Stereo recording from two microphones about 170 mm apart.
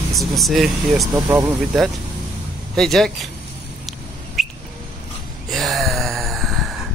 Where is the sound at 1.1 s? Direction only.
15° right (ahead or behind).